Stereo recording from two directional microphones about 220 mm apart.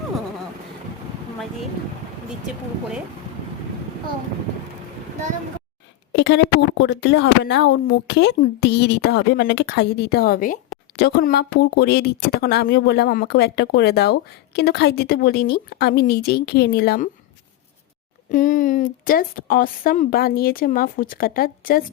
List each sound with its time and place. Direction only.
6.1 s speech: 55° left (ahead or behind)
18.3 s a woman's voice: 35° left (ahead or behind)